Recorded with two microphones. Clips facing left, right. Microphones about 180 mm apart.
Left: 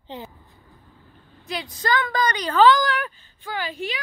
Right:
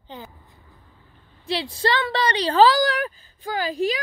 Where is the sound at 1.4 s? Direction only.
30° right (ahead or behind).